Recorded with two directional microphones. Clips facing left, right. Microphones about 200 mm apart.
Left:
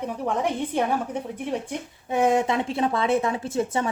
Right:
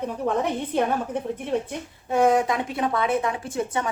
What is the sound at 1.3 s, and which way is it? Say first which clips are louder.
Speech: right 2 dB; 15° left (ahead or behind).